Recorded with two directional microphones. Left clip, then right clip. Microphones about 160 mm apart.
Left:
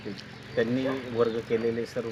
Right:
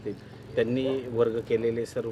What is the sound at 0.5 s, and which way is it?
Speech, 35° right (ahead or behind).